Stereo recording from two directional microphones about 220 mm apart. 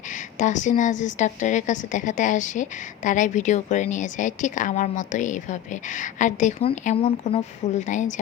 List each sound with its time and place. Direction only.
0.3 s a woman's voice: 35° left (ahead or behind)